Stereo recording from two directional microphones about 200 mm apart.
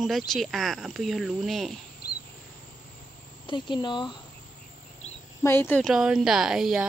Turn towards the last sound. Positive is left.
turn(degrees=0)  # may be behind; listen again after turning